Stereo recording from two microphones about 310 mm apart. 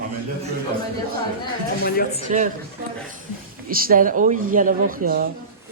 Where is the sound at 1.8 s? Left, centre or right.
Left.